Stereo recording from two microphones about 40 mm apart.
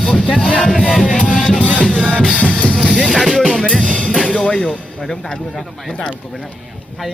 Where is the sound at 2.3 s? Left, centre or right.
Right.